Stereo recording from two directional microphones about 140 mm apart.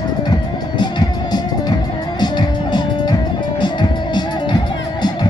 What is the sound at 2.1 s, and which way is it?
Music, 30° left (ahead or behind).